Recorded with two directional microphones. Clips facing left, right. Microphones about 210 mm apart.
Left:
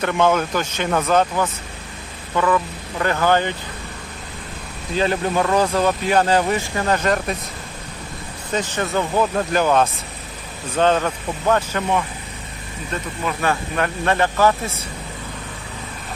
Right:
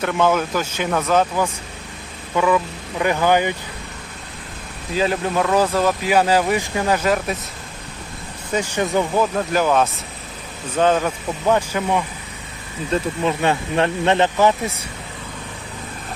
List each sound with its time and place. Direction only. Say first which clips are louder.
0.0 s speech: even; centre (ahead or behind)
4.9 s speech: even; centre (ahead or behind)
8.5 s speech: right 2 dB; 10° right (ahead or behind)
12.9 s speech: right 6 dB; 25° right (ahead or behind)